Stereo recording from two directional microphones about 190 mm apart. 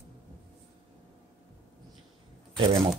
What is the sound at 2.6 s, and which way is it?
Speech, 30° right (ahead or behind).